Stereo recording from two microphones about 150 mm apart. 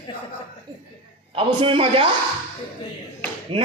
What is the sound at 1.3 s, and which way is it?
Speech, 35° right (ahead or behind).